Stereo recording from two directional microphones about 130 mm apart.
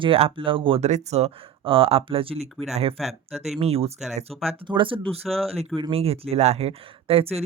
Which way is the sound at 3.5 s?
50° right (ahead or behind).